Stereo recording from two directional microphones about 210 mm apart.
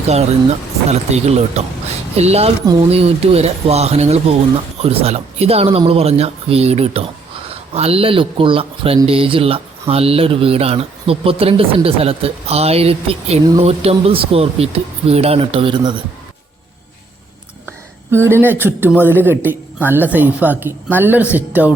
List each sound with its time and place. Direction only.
0.1 s speech: 30° right (ahead or behind)
17.7 s a woman's voice: 10° right (ahead or behind)